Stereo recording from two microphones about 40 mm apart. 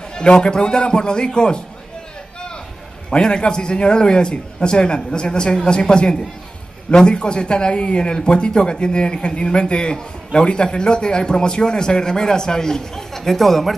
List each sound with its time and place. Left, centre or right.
0.1 s speech: left
3.1 s speech: left; by 13.7 s centre